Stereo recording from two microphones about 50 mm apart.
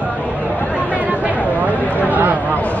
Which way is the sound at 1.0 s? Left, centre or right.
Right.